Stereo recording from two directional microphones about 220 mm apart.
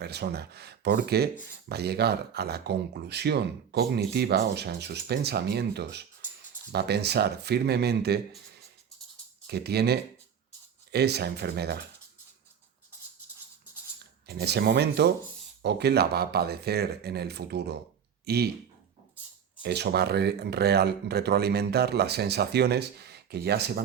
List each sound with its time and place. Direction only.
0.0 s speech: 50° right (ahead or behind)
9.5 s speech: 45° right (ahead or behind)
14.0 s speech: 45° right (ahead or behind)
19.6 s speech: 50° right (ahead or behind)